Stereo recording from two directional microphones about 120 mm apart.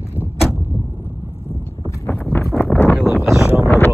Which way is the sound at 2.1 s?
20° left (ahead or behind).